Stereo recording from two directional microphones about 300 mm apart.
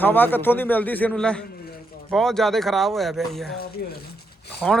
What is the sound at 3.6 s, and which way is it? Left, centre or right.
Speech, left.